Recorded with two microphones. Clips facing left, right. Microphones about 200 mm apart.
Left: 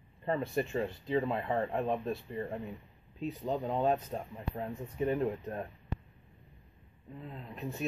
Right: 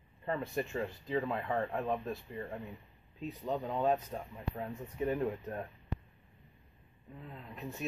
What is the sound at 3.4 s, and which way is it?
Speech, 25° left (ahead or behind).